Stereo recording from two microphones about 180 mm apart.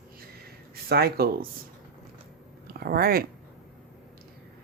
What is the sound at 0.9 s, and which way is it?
Speech, 60° right (ahead or behind).